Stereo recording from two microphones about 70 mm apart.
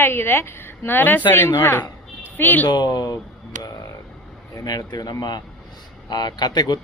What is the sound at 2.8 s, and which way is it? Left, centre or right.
Speech, left.